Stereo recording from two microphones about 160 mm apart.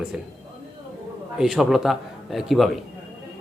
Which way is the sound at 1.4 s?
Centre (ahead or behind).